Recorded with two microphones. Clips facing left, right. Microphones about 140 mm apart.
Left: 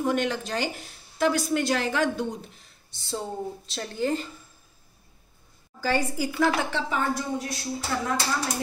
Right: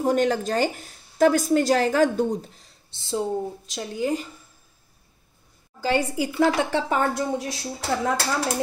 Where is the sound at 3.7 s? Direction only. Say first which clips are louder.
Right 2 dB; 10° right (ahead or behind).